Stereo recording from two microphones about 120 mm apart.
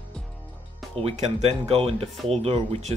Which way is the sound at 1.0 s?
65° right (ahead or behind).